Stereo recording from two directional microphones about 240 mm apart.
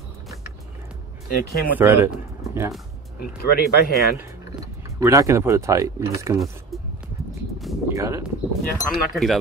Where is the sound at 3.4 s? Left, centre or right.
Left.